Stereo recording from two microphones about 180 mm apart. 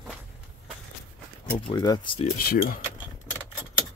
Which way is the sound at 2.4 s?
55° left (ahead or behind).